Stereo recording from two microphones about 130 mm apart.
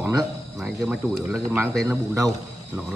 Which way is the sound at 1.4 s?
25° right (ahead or behind).